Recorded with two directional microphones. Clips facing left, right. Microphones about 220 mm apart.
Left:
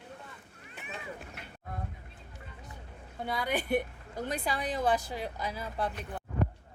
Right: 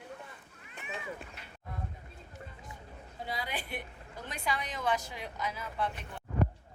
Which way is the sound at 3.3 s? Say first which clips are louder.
Left 9 dB; 50° left (ahead or behind).